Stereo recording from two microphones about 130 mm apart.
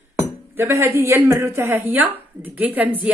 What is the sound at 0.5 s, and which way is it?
A woman's voice, 20° right (ahead or behind).